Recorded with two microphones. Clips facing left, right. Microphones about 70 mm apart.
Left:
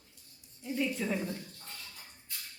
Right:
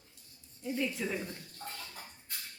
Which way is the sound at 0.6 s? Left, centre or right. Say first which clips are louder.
Left 1 dB; centre.